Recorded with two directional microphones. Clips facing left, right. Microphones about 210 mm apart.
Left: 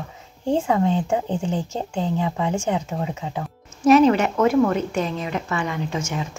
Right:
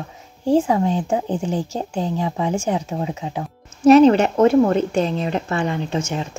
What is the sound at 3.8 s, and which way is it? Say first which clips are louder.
A woman's voice: right 4 dB; 30° right (ahead or behind).